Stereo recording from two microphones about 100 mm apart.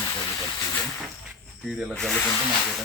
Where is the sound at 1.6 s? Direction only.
5° right (ahead or behind).